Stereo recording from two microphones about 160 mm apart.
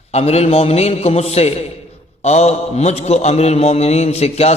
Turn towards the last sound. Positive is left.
turn(degrees=40)  # may be behind; listen again after turning